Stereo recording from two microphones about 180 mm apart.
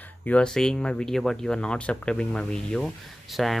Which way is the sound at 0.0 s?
10° left (ahead or behind).